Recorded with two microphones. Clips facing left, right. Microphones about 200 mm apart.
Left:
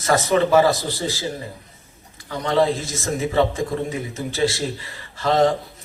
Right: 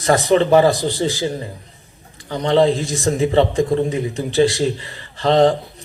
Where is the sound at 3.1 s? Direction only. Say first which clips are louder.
Right 4 dB; 30° right (ahead or behind).